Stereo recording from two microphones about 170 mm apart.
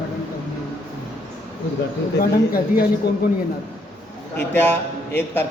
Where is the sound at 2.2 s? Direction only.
60° left (ahead or behind).